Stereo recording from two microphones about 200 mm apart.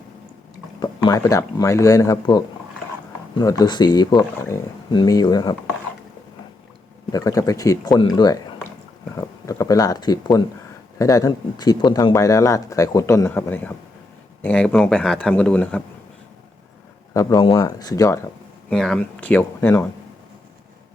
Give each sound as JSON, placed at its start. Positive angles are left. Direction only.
{"t": 0.8, "sound": "speech", "side_deg": 20}
{"t": 7.1, "sound": "speech", "side_deg": 15}
{"t": 9.5, "sound": "speech", "side_deg": 15}
{"t": 17.2, "sound": "speech", "side_deg": 15}
{"t": 18.7, "sound": "speech", "side_deg": 5}